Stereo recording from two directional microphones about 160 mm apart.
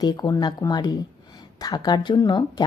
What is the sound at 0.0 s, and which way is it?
A woman's voice, 25° left (ahead or behind).